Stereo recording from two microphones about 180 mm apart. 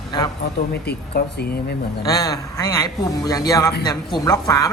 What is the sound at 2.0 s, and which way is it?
A woman's voice, 20° left (ahead or behind).